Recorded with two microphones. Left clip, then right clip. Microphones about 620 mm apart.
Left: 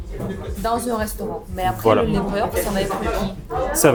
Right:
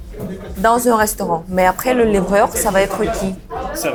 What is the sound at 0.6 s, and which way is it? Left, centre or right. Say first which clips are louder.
Speech: right 9 dB; right.